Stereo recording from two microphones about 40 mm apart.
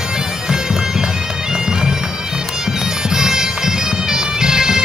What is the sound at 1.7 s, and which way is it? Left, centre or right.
Bagpipes, centre.